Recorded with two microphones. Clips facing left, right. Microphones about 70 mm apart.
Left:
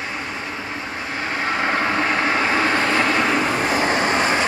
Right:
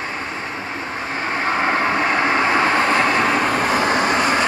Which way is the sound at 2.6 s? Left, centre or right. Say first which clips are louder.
Right 2 dB; right.